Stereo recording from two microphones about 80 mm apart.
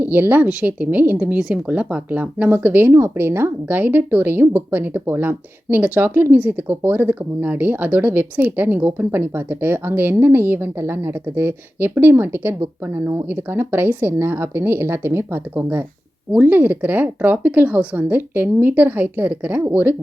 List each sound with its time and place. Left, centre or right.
0.0 s speech: right